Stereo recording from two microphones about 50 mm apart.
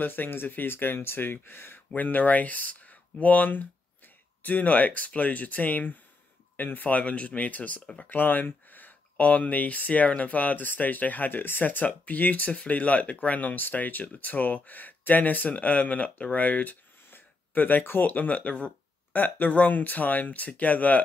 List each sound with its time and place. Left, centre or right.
0.0 s speech: left
2.0 s speech: left
8.1 s speech: left
17.1 s a sound: left
18.1 s speech: left
19.1 s speech: left